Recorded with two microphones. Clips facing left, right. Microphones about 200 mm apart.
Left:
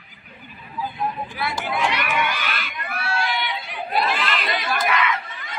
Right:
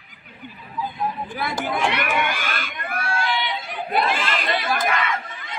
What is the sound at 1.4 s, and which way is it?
Crowd, 50° right (ahead or behind).